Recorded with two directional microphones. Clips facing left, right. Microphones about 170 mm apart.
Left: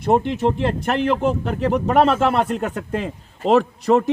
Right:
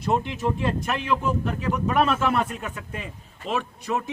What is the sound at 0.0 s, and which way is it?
A man's voice, 60° left (ahead or behind).